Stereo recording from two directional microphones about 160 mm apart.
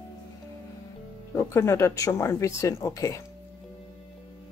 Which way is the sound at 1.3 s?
15° left (ahead or behind).